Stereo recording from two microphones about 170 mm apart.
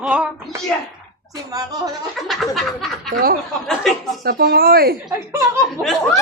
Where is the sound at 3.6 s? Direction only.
Centre (ahead or behind).